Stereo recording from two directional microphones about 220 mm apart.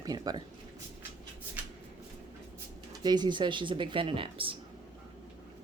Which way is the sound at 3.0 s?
20° right (ahead or behind).